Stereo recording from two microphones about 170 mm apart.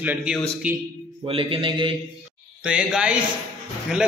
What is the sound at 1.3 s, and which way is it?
Speech, 30° right (ahead or behind).